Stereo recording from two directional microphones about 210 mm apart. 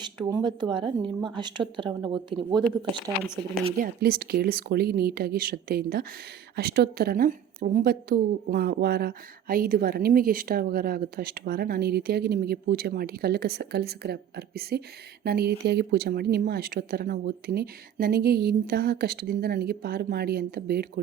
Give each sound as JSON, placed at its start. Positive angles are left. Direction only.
{"t": 0.0, "sound": "speech", "side_deg": -20}
{"t": 3.8, "sound": "a woman's voice", "side_deg": -45}